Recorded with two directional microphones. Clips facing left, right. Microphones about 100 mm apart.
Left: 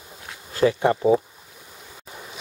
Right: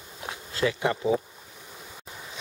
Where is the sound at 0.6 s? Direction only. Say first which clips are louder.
Left 7 dB; 35° left (ahead or behind).